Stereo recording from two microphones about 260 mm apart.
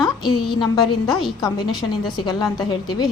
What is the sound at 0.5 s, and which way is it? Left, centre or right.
Speech, centre.